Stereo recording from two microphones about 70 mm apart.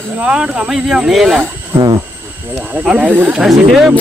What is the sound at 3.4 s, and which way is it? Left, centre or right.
Speech, centre.